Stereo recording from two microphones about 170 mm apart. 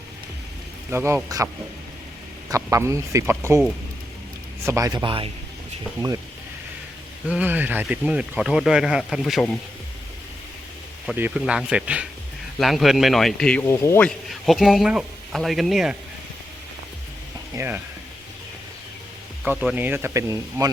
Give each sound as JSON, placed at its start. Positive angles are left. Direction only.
{"t": 0.9, "sound": "speech", "side_deg": -15}
{"t": 2.5, "sound": "speech", "side_deg": -20}
{"t": 4.6, "sound": "speech", "side_deg": -20}
{"t": 7.3, "sound": "speech", "side_deg": -10}
{"t": 11.0, "sound": "speech", "side_deg": -5}
{"t": 14.4, "sound": "speech", "side_deg": 0}
{"t": 17.5, "sound": "speech", "side_deg": -15}
{"t": 19.5, "sound": "speech", "side_deg": -10}